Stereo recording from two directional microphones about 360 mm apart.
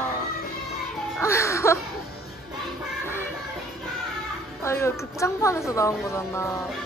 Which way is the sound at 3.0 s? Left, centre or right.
Centre.